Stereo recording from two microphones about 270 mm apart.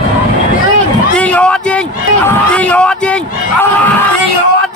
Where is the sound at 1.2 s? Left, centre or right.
Centre.